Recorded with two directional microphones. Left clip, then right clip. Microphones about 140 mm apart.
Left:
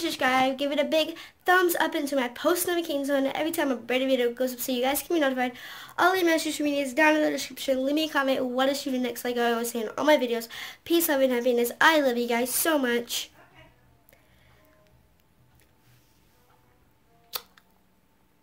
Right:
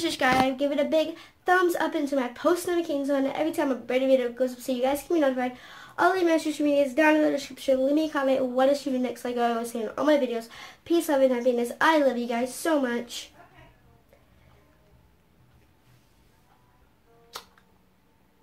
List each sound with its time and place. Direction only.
0.0 s a woman's voice: 15° left (ahead or behind)